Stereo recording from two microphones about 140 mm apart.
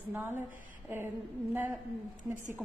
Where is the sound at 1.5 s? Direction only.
10° right (ahead or behind).